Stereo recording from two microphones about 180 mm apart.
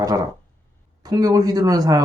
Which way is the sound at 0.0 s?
20° right (ahead or behind).